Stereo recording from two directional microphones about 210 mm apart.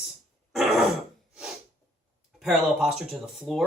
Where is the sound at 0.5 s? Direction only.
Centre (ahead or behind).